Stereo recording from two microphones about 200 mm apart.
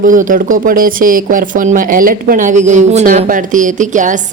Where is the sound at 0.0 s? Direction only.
40° right (ahead or behind).